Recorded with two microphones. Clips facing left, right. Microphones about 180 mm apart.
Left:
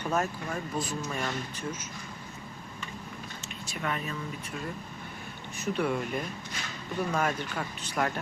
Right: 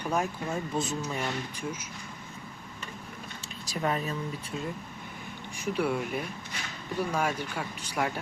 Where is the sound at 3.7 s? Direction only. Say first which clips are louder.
Right 4 dB; 35° right (ahead or behind).